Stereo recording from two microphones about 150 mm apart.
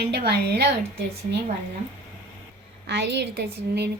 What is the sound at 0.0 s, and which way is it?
Speech, 90° right.